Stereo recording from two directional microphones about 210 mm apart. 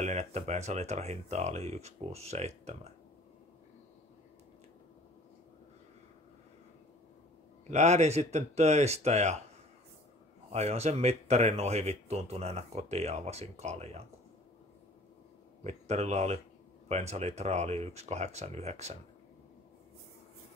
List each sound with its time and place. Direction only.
0.0 s speech: 35° right (ahead or behind)
7.7 s speech: 30° right (ahead or behind)
10.5 s speech: 30° right (ahead or behind)
15.6 s speech: 30° right (ahead or behind)